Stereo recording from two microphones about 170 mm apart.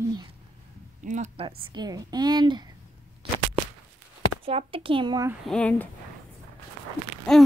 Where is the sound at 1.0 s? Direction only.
45° right (ahead or behind); by 2.6 s 25° right (ahead or behind).